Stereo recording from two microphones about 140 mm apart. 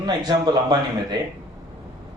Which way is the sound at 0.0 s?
30° right (ahead or behind).